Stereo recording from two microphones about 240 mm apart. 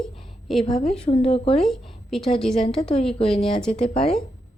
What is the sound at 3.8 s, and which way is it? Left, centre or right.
Speech, left.